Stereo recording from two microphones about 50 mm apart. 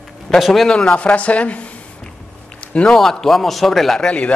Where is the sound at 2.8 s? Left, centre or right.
Centre.